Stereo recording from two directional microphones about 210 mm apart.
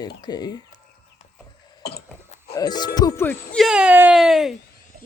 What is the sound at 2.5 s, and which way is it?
Speech, 20° left (ahead or behind).